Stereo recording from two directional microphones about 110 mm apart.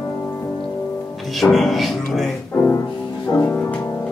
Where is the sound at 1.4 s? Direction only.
Centre (ahead or behind).